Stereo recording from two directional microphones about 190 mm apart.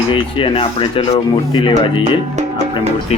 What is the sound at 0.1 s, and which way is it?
Speech, 25° left (ahead or behind).